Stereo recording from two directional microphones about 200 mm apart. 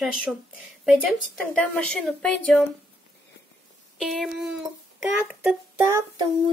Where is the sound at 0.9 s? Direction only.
5° left (ahead or behind).